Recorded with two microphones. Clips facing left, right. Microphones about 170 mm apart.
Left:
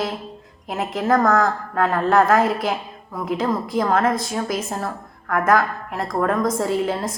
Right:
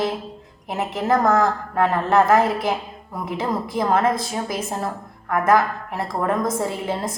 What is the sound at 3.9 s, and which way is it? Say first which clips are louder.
A woman's voice: right 2 dB; 10° right (ahead or behind).